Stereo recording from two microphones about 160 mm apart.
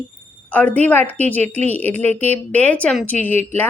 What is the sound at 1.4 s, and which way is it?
Speech, 45° right (ahead or behind).